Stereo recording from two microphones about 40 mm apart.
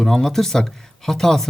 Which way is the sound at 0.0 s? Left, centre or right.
Centre.